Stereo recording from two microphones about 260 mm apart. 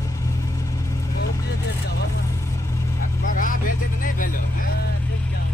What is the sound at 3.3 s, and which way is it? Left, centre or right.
Vehicle, left.